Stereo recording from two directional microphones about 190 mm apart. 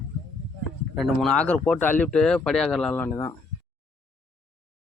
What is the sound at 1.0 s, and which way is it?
Speech, centre (ahead or behind).